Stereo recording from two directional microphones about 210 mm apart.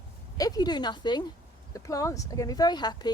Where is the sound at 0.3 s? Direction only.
20° left (ahead or behind).